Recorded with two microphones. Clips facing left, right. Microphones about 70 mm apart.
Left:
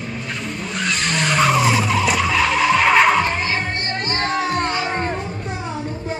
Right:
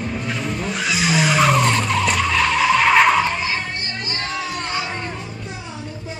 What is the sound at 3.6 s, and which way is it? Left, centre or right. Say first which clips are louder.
Music: left 4 dB; left.